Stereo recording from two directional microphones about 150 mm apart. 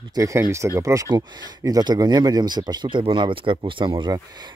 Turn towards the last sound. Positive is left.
turn(degrees=-30)  # may be behind; listen again after turning